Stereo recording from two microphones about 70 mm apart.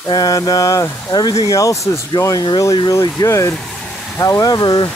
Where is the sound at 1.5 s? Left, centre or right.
Left.